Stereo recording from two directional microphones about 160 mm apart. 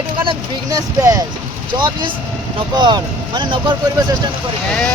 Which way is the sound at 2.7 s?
25° right (ahead or behind).